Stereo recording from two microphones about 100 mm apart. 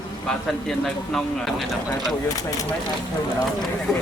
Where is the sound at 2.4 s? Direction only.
35° left (ahead or behind).